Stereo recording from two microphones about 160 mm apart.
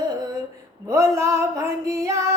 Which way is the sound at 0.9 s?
15° right (ahead or behind).